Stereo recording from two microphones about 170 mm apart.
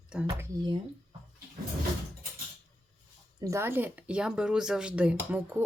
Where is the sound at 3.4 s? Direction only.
15° right (ahead or behind).